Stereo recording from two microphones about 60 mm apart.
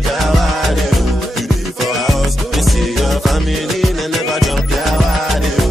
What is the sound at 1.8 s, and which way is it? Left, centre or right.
Music, centre.